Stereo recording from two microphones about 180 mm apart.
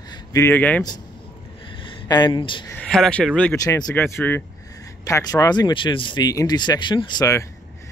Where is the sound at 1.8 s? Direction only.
25° left (ahead or behind).